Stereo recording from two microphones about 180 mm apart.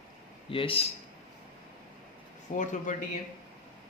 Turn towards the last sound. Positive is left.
turn(degrees=45)  # may be behind; listen again after turning